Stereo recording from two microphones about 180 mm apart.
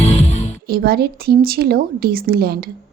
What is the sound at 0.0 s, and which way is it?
Music, 35° left (ahead or behind).